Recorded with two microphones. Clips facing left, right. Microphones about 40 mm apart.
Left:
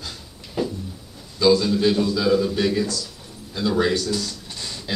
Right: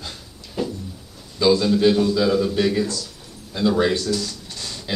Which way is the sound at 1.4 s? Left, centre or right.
Centre.